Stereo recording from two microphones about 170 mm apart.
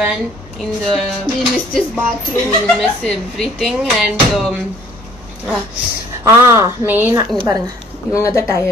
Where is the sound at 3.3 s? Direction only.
Centre (ahead or behind).